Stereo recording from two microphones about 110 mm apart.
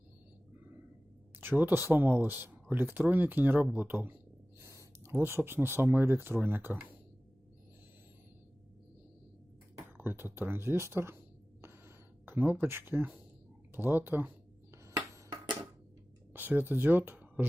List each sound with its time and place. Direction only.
1.4 s speech: 20° right (ahead or behind)
10.0 s speech: 20° right (ahead or behind)
12.2 s speech: 20° right (ahead or behind)
16.3 s speech: 15° right (ahead or behind)